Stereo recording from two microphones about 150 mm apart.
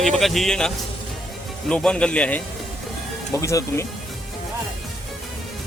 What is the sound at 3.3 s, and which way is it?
Speech, 20° left (ahead or behind).